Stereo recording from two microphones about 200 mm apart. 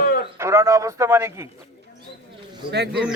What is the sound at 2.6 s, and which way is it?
Speech, 55° right (ahead or behind).